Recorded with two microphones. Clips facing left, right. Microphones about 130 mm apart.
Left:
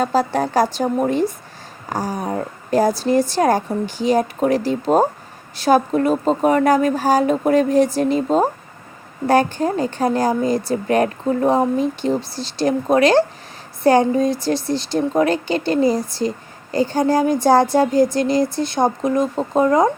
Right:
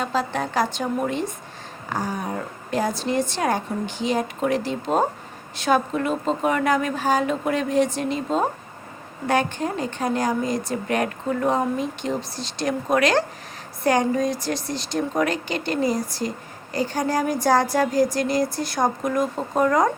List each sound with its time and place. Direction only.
0.0 s speech: 40° left (ahead or behind); by 19.9 s 25° left (ahead or behind)